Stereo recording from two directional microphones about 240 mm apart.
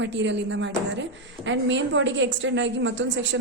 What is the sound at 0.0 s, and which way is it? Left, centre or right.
A woman's voice, right.